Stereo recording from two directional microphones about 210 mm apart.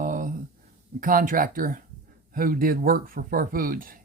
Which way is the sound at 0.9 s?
40° right (ahead or behind).